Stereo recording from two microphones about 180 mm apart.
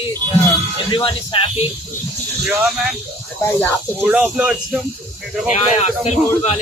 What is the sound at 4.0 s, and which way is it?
Speech, 5° right (ahead or behind).